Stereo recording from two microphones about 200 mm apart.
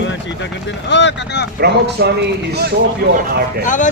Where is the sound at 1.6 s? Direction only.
55° right (ahead or behind).